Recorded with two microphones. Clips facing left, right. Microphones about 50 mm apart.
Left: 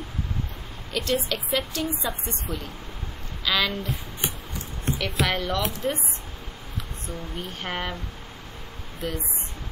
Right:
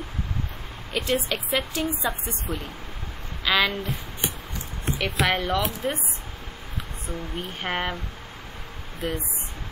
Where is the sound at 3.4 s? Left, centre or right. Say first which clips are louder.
Right 2 dB; centre.